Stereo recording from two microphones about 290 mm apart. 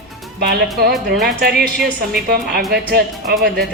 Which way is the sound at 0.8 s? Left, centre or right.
Right.